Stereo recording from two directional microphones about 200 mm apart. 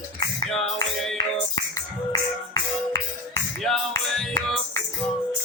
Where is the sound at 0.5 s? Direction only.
Centre (ahead or behind).